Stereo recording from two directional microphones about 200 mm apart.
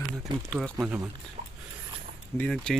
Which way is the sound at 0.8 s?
5° right (ahead or behind).